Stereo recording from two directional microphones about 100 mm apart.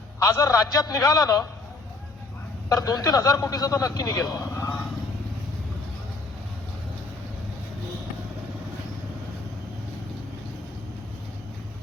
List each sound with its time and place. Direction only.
0.2 s a man's voice: 30° left (ahead or behind)
2.6 s a man's voice: 35° left (ahead or behind)